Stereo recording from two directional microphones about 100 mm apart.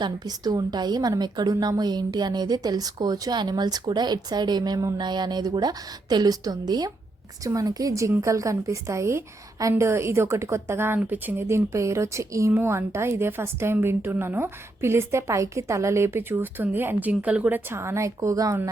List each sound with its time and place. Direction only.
0.0 s a woman's voice: 40° right (ahead or behind)